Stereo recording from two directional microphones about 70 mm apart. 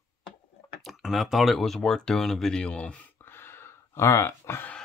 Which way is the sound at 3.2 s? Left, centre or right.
Left.